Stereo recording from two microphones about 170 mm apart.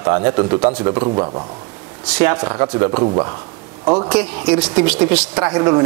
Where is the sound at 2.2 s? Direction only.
15° right (ahead or behind).